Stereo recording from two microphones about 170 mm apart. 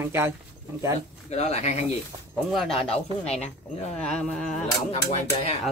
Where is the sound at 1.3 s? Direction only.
40° left (ahead or behind).